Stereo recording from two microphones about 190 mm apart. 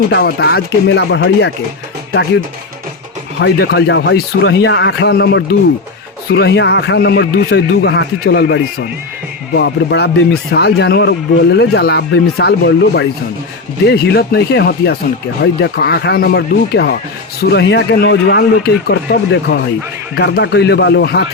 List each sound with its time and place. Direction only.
0.1 s a man's voice: 55° left (ahead or behind)
3.4 s a man's voice: 60° left (ahead or behind)